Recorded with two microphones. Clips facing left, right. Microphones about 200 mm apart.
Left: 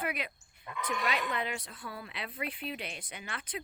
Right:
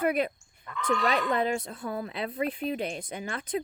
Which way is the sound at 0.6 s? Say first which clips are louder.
Right 7 dB; 15° left (ahead or behind).